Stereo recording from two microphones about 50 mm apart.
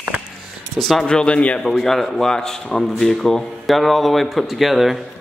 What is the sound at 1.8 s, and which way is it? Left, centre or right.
A man's voice, centre.